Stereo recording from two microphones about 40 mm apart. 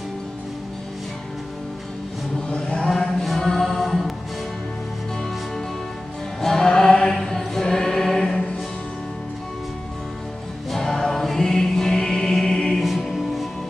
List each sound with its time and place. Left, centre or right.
2.5 s chant: centre
6.4 s music: centre
7.2 s choir: centre
10.7 s choir: centre
12.6 s music: centre